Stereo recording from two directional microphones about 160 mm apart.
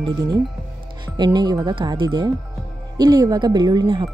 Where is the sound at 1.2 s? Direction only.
25° right (ahead or behind).